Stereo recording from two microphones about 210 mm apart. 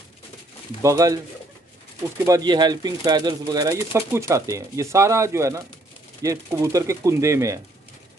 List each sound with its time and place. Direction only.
0.8 s speech: 15° right (ahead or behind)
2.2 s speech: 20° right (ahead or behind)